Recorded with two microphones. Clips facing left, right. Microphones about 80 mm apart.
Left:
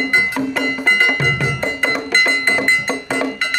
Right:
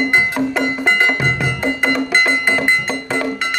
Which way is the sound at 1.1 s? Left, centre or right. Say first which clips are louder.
Even; centre.